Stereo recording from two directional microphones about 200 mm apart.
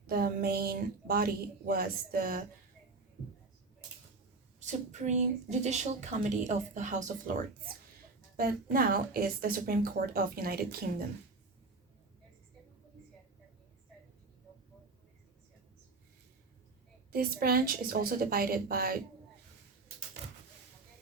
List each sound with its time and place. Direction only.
0.1 s speech: 50° right (ahead or behind)
4.6 s a woman's voice: 35° right (ahead or behind)
17.1 s speech: 50° right (ahead or behind)